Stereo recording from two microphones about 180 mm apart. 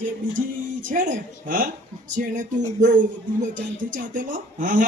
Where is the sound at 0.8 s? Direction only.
50° right (ahead or behind).